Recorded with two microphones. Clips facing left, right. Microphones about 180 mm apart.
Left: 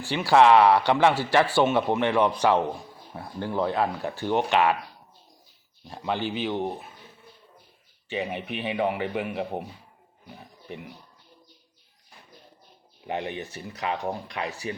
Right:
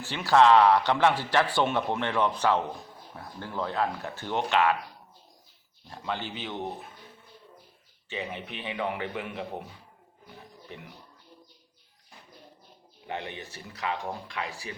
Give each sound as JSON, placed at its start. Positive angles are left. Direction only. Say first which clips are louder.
{"t": 0.0, "sound": "a man's voice", "louder": "left 2 dB", "side_deg": 10}
{"t": 5.9, "sound": "a man's voice", "louder": "left 6 dB", "side_deg": 15}
{"t": 8.1, "sound": "a man's voice", "louder": "left 6 dB", "side_deg": 15}
{"t": 13.1, "sound": "a man's voice", "louder": "left 5 dB", "side_deg": 15}